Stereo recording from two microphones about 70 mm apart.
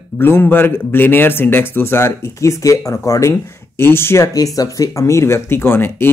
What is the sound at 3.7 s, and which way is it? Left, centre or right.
Speech, left.